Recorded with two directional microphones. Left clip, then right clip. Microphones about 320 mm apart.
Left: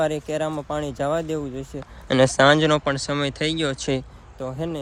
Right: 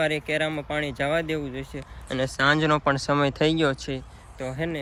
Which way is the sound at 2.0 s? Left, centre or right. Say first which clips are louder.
Left 10 dB; left.